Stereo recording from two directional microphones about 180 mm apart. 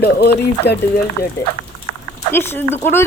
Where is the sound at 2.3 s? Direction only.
10° left (ahead or behind).